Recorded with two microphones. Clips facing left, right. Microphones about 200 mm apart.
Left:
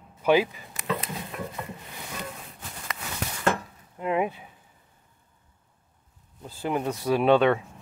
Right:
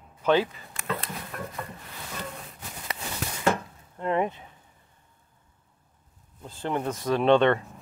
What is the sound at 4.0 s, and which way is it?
Speech, 5° left (ahead or behind).